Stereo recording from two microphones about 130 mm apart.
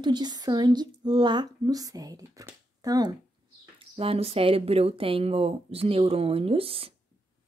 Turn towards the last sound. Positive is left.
turn(degrees=-45)  # may be behind; listen again after turning